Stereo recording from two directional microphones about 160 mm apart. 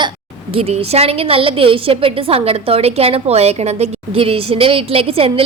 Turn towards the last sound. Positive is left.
turn(degrees=-35)  # may be behind; listen again after turning